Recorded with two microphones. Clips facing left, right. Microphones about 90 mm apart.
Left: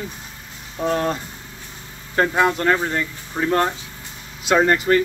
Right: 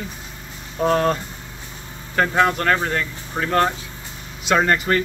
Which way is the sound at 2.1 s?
15° left (ahead or behind).